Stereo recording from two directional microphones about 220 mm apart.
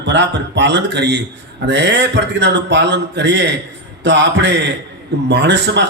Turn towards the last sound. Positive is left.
turn(degrees=-50)  # may be behind; listen again after turning